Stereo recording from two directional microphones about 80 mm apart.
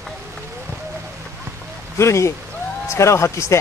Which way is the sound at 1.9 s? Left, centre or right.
Left.